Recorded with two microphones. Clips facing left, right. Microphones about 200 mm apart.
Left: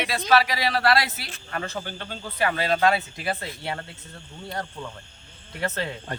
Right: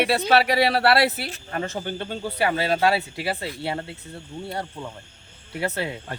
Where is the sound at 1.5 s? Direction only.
25° right (ahead or behind).